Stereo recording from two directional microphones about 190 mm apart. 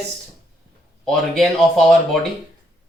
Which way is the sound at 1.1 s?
Centre (ahead or behind).